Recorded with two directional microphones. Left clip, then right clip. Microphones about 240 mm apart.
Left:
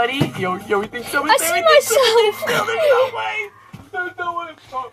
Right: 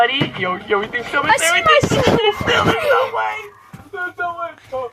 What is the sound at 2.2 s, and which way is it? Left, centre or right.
Speech, left.